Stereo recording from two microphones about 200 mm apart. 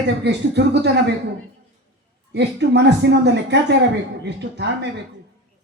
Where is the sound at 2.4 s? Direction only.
60° right (ahead or behind).